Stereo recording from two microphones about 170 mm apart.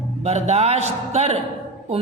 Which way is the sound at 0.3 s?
40° right (ahead or behind).